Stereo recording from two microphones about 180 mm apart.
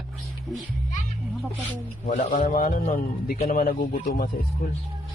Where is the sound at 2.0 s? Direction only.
50° left (ahead or behind).